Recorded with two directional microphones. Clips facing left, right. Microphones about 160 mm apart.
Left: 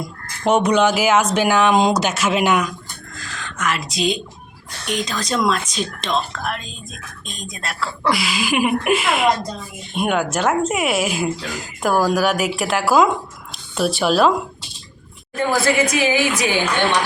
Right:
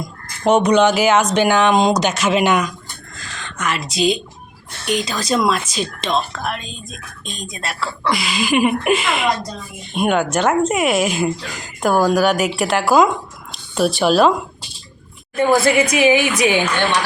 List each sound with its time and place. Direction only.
0.4 s speech: 5° left (ahead or behind)
3.2 s a sound: centre (ahead or behind)
4.9 s speech: centre (ahead or behind)
15.4 s a woman's voice: 15° right (ahead or behind)